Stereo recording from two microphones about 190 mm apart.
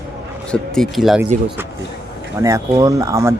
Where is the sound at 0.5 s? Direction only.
5° left (ahead or behind).